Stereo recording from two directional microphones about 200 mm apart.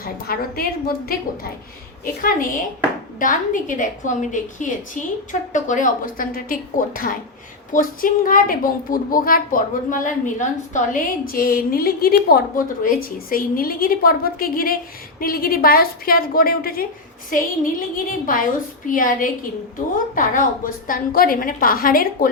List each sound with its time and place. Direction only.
0.0 s a woman's voice: 50° left (ahead or behind)
2.2 s a woman's voice: 45° left (ahead or behind)